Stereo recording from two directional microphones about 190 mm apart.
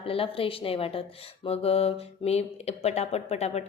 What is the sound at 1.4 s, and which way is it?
Mantra, 30° left (ahead or behind).